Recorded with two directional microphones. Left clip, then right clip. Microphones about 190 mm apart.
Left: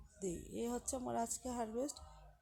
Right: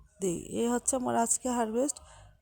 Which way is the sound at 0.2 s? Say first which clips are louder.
Right 12 dB; 45° right (ahead or behind).